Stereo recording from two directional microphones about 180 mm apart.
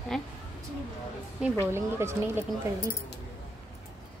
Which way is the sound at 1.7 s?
15° right (ahead or behind).